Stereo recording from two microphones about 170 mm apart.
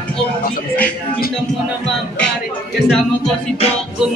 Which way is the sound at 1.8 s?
5° left (ahead or behind).